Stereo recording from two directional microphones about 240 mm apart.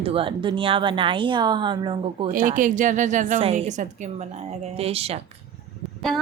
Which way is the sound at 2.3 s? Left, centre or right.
Right.